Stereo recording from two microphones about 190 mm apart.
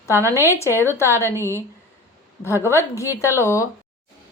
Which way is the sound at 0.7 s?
10° left (ahead or behind).